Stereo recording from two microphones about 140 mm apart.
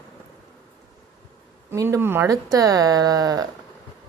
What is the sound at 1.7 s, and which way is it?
Speech, 20° right (ahead or behind).